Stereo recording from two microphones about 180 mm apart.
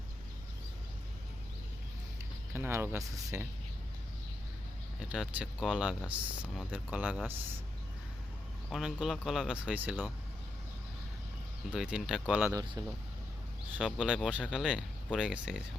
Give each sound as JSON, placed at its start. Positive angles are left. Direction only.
{"t": 2.6, "sound": "speech", "side_deg": -15}
{"t": 4.9, "sound": "speech", "side_deg": -5}
{"t": 8.7, "sound": "speech", "side_deg": 0}
{"t": 11.7, "sound": "speech", "side_deg": -5}
{"t": 12.8, "sound": "speech", "side_deg": -20}
{"t": 13.7, "sound": "speech", "side_deg": -5}